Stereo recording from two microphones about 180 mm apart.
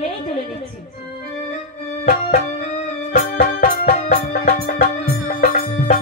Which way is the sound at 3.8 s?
40° left (ahead or behind).